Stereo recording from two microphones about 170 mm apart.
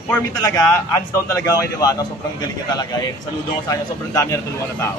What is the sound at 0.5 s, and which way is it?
A man's voice, 20° left (ahead or behind).